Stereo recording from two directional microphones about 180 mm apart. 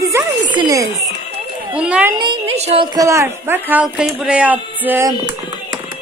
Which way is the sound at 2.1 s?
25° right (ahead or behind).